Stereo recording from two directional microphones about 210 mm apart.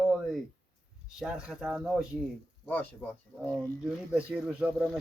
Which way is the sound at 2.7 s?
10° left (ahead or behind).